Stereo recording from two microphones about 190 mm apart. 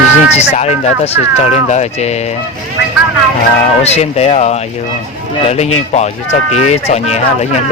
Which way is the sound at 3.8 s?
35° left (ahead or behind).